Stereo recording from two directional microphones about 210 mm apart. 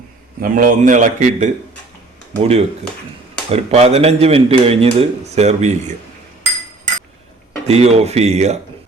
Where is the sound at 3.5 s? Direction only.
30° right (ahead or behind).